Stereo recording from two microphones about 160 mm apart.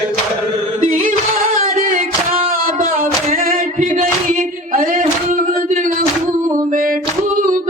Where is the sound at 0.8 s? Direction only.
50° right (ahead or behind).